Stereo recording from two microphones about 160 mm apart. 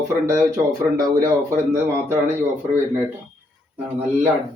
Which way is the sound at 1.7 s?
15° right (ahead or behind).